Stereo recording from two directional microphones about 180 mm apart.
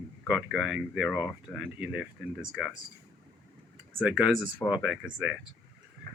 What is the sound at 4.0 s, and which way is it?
Speech, 5° right (ahead or behind).